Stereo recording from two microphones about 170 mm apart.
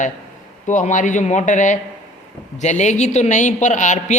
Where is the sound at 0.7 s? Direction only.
45° left (ahead or behind).